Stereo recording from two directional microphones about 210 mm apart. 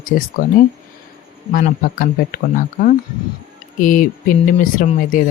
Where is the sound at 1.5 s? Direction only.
40° left (ahead or behind).